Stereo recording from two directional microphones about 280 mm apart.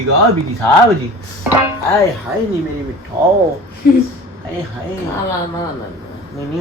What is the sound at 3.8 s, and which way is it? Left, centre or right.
Speech, left.